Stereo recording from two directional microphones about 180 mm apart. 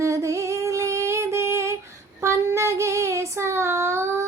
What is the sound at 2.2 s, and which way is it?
Child singing, 15° right (ahead or behind).